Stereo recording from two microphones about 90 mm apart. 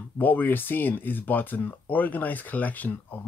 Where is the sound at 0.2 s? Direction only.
20° left (ahead or behind).